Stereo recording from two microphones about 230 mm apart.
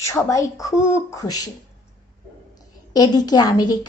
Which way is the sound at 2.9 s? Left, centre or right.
Centre.